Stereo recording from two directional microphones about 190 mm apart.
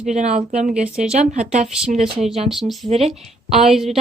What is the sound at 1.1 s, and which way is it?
Speech, 35° right (ahead or behind).